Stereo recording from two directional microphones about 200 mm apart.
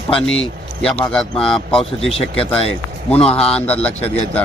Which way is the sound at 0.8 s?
5° left (ahead or behind).